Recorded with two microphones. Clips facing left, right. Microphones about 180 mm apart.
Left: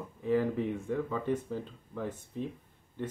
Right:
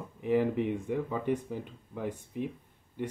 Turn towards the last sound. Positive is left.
turn(degrees=-15)  # may be behind; listen again after turning